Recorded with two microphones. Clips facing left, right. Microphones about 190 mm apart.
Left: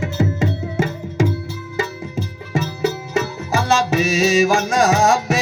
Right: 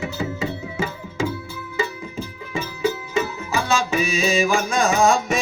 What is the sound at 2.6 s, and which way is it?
Music, 75° left (ahead or behind).